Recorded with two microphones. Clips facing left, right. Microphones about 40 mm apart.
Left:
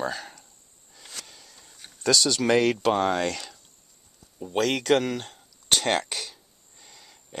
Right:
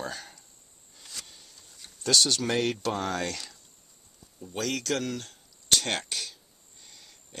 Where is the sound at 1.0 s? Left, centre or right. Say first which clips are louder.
Left 2 dB; left.